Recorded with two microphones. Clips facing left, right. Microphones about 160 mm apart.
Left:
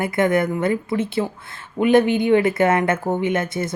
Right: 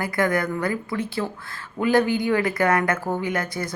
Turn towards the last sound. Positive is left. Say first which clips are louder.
# left 5 dB
turn(degrees=25)  # may be behind; listen again after turning